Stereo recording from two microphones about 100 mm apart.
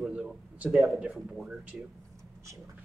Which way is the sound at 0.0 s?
10° right (ahead or behind).